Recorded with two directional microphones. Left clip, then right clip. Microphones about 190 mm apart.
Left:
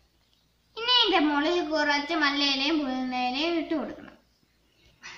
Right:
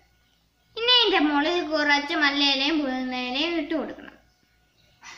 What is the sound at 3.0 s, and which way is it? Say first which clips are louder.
Child singing: right 1 dB; 45° left (ahead or behind).